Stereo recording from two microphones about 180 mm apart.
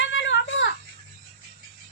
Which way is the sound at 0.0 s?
90° left.